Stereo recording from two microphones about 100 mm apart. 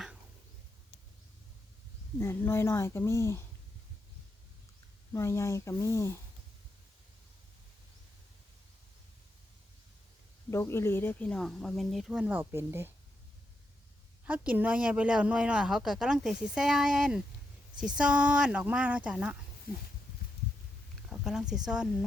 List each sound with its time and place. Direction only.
2.1 s speech: 25° left (ahead or behind)
5.1 s speech: 30° left (ahead or behind)
10.5 s speech: 25° left (ahead or behind); by 12.9 s 25° right (ahead or behind)
14.3 s speech: 15° right (ahead or behind)
21.1 s speech: 5° right (ahead or behind)